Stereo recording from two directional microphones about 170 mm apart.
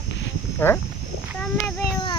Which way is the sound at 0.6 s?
15° left (ahead or behind).